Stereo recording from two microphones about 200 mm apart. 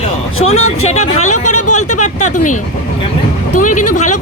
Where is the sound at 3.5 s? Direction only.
40° left (ahead or behind).